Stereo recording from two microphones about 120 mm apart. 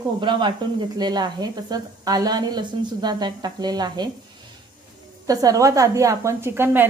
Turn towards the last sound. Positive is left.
turn(degrees=-20)  # may be behind; listen again after turning